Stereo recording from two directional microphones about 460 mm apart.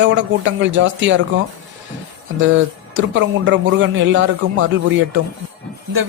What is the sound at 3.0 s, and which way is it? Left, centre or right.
Speech, right.